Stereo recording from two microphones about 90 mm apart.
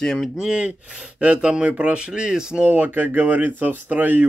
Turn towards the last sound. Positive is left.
turn(degrees=-20)  # may be behind; listen again after turning